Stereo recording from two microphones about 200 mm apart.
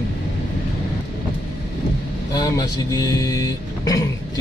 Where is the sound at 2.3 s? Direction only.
20° left (ahead or behind).